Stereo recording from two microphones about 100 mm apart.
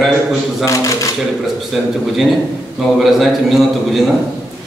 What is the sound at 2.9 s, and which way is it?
A man's voice, centre (ahead or behind).